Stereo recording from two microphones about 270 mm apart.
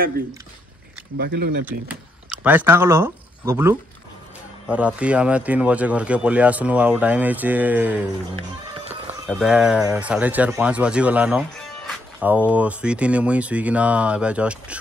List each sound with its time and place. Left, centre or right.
1.1 s speech: right
2.2 s speech: centre
9.3 s speech: centre